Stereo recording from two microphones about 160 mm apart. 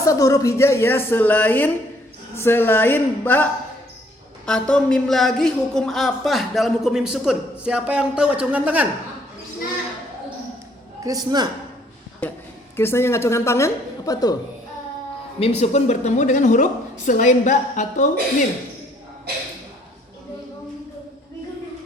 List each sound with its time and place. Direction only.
0.0 s a woman's voice: 20° left (ahead or behind); by 8.9 s 10° right (ahead or behind)
11.0 s a man's voice: 25° right (ahead or behind)
12.2 s a woman's voice: 10° left (ahead or behind)
15.4 s speech: 40° left (ahead or behind)